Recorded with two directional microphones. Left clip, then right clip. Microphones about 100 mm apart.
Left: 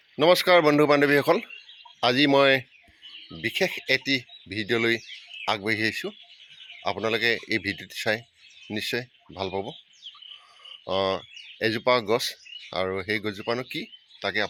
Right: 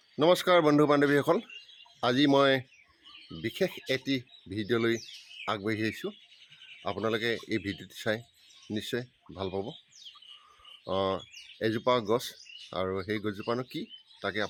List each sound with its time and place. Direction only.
0.2 s speech: 10° right (ahead or behind)
7.1 s speech: 15° right (ahead or behind)
9.5 s speech: 10° left (ahead or behind)
10.8 s speech: 15° right (ahead or behind)